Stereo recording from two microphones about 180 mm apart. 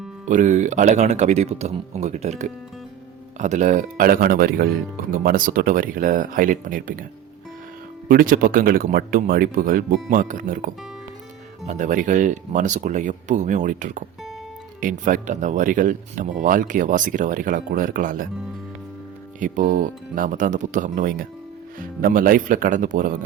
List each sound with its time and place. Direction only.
0.3 s speech: 45° right (ahead or behind)
8.0 s speech: 50° right (ahead or behind)
19.4 s speech: 45° right (ahead or behind)